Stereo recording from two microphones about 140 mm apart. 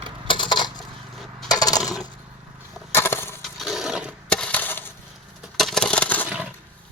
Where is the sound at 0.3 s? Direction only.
35° left (ahead or behind).